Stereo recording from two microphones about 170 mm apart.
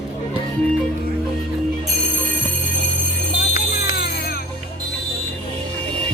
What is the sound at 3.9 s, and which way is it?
Music, 65° left (ahead or behind).